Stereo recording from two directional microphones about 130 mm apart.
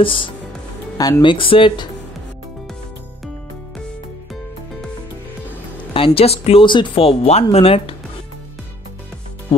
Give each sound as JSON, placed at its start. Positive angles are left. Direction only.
{"t": 0.0, "sound": "speech", "side_deg": 40}
{"t": 0.9, "sound": "speech", "side_deg": 25}
{"t": 1.2, "sound": "speech", "side_deg": 40}
{"t": 5.9, "sound": "speech", "side_deg": 45}